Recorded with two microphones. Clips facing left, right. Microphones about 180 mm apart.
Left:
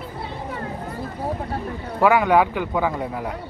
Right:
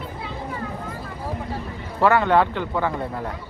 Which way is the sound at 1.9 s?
10° left (ahead or behind).